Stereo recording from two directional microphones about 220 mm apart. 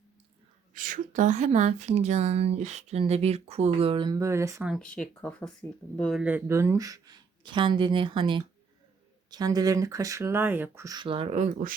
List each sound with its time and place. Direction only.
0.7 s a woman's voice: 35° right (ahead or behind); by 4.7 s 15° right (ahead or behind)
4.7 s speech: 5° left (ahead or behind); by 11.7 s 35° right (ahead or behind)